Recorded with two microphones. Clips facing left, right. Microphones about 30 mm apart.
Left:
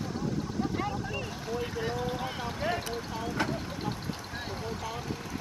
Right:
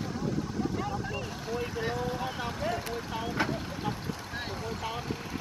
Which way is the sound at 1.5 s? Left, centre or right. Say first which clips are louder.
Even; centre.